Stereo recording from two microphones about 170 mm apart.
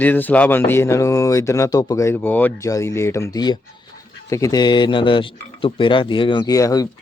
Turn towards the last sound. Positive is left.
turn(degrees=20)  # may be behind; listen again after turning